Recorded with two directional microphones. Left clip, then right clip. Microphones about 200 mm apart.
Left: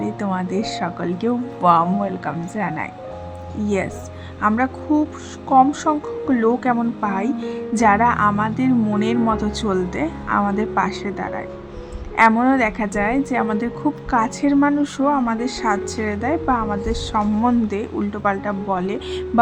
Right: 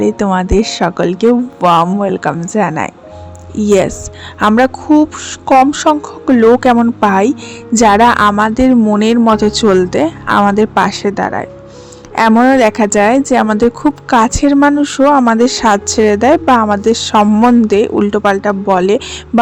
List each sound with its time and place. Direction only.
0.0 s a woman's voice: 35° right (ahead or behind)